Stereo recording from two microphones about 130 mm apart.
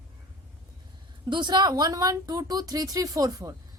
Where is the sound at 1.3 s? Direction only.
35° right (ahead or behind).